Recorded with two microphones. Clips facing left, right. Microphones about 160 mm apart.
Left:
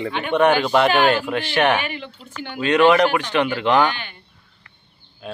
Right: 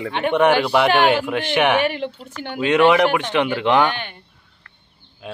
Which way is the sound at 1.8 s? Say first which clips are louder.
Right 8 dB; 60° right (ahead or behind).